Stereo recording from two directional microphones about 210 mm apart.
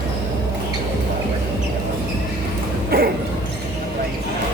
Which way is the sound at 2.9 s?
45° right (ahead or behind).